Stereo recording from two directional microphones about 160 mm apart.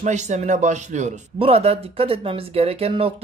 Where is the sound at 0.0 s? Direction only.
50° right (ahead or behind).